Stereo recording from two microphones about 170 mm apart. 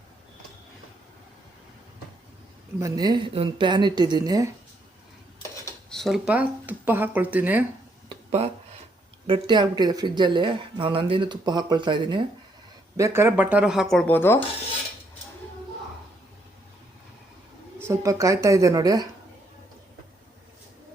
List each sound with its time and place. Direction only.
2.7 s speech: 20° right (ahead or behind)
5.9 s speech: centre (ahead or behind)
8.1 s a sound: 35° right (ahead or behind)
9.2 s speech: 30° right (ahead or behind)
13.0 s speech: 15° right (ahead or behind)
13.9 s speech: 5° left (ahead or behind)
17.7 s speech: 15° right (ahead or behind)